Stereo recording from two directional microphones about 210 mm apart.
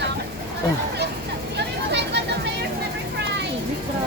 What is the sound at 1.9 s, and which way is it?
Music, 55° right (ahead or behind).